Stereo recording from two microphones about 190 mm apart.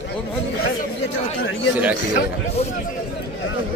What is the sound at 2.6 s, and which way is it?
Speech, 35° left (ahead or behind).